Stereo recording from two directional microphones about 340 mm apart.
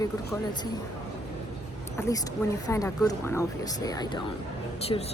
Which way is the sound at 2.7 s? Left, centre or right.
Centre.